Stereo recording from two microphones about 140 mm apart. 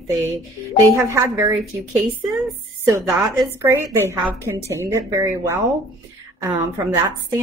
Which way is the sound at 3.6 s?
20° right (ahead or behind).